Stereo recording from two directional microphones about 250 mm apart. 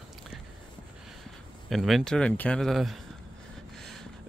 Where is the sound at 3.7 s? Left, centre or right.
Centre.